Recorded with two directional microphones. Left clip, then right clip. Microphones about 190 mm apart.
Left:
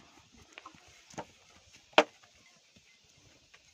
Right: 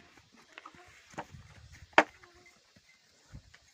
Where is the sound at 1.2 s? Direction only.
40° left (ahead or behind).